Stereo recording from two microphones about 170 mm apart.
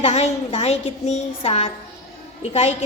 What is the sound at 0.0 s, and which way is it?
A woman's voice, 40° left (ahead or behind).